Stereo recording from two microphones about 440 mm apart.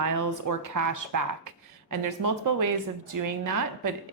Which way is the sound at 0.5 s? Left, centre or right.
Right.